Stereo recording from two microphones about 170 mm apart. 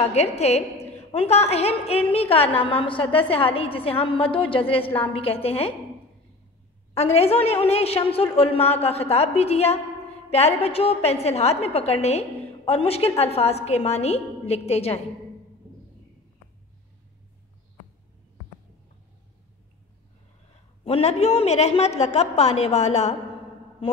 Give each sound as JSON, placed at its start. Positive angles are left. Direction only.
{"t": 0.0, "sound": "a woman's voice", "side_deg": 40}
{"t": 6.9, "sound": "a woman's voice", "side_deg": 35}
{"t": 20.8, "sound": "a woman's voice", "side_deg": 35}